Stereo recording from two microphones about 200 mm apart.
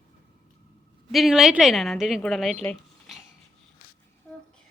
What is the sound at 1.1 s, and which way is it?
A woman's voice, centre (ahead or behind).